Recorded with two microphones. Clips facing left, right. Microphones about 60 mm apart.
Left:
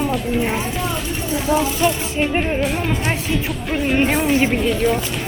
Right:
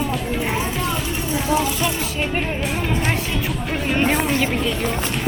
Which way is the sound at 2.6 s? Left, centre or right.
Centre.